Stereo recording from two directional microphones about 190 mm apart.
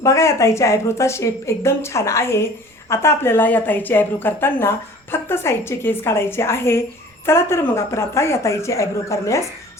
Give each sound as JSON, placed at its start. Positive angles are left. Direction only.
{"t": 0.0, "sound": "a woman's voice", "side_deg": 15}